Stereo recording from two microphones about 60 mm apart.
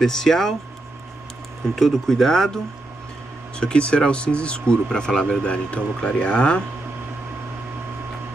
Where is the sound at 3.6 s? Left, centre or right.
Centre.